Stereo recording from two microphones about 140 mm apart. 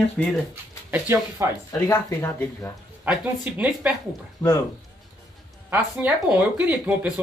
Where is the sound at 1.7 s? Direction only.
15° left (ahead or behind).